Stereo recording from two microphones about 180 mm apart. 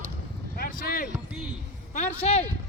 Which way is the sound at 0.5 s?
55° left (ahead or behind).